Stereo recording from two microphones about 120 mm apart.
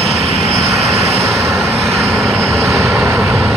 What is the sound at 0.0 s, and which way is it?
Vehicle, 60° right (ahead or behind).